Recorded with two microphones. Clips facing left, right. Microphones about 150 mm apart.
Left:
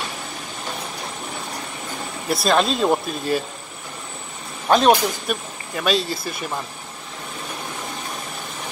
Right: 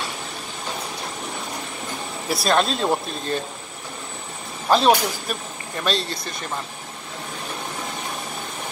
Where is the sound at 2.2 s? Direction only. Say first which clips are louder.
Left 2 dB; centre (ahead or behind).